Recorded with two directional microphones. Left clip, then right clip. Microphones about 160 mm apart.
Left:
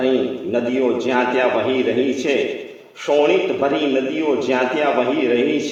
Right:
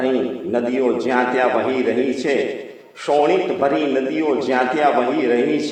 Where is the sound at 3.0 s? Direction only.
30° right (ahead or behind).